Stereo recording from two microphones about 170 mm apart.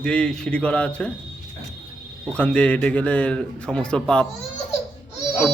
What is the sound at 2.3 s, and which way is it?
A man's voice, 5° left (ahead or behind).